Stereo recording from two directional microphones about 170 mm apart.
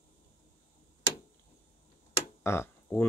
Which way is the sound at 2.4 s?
15° left (ahead or behind).